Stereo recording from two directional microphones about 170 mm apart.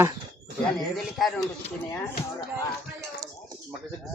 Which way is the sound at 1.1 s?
Centre (ahead or behind).